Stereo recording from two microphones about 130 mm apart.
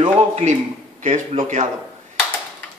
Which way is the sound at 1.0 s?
70° right (ahead or behind).